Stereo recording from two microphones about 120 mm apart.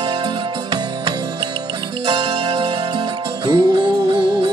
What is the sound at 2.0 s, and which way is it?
Music, 40° right (ahead or behind).